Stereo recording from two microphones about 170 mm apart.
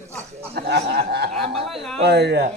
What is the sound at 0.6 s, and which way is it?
Chuckle, 80° right.